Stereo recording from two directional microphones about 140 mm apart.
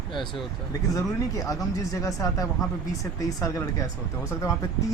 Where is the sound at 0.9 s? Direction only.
25° left (ahead or behind).